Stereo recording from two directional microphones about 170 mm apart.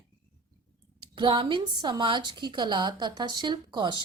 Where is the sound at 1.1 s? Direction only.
30° right (ahead or behind).